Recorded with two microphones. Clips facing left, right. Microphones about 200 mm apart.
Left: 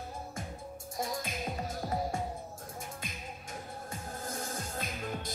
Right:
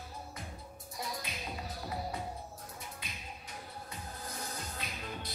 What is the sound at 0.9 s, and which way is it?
Music, 45° left (ahead or behind).